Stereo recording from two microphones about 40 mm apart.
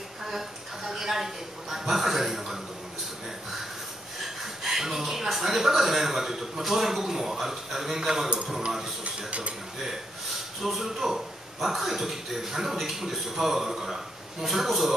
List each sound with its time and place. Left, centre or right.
0.2 s a woman's voice: centre
4.6 s speech: centre
9.0 s speech: right
10.6 s speech: centre